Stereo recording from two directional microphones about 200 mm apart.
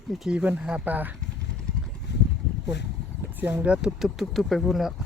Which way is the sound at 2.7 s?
60° left (ahead or behind).